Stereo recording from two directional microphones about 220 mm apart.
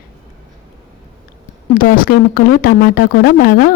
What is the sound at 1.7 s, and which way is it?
Speech, 40° left (ahead or behind).